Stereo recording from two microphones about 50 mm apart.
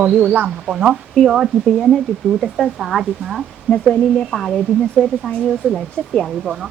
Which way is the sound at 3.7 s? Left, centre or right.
Left.